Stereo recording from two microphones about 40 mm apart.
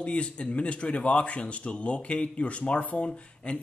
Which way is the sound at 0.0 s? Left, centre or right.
Left.